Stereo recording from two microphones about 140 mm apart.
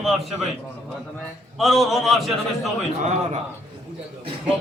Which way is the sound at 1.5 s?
Centre (ahead or behind).